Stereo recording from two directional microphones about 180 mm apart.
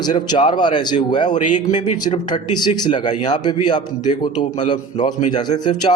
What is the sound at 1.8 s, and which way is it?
A man's voice, 25° left (ahead or behind).